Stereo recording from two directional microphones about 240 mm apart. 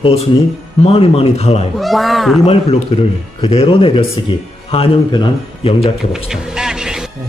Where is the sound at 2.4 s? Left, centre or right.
Left.